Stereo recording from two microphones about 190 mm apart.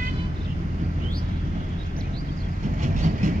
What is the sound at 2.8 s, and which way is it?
Train, 40° right (ahead or behind).